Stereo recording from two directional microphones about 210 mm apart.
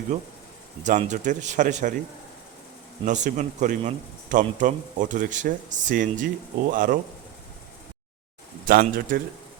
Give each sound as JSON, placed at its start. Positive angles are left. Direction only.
{"t": 0.9, "sound": "speech", "side_deg": -35}
{"t": 3.0, "sound": "speech", "side_deg": -35}
{"t": 8.6, "sound": "speech", "side_deg": -40}